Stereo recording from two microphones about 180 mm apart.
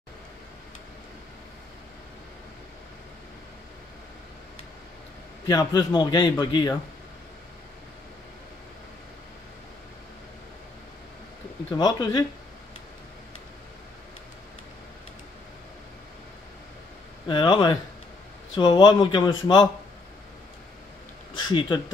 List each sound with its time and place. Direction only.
5.5 s a man's voice: 20° left (ahead or behind)
11.7 s a man's voice: 25° left (ahead or behind)
17.3 s a man's voice: 25° left (ahead or behind)
21.3 s speech: 25° left (ahead or behind)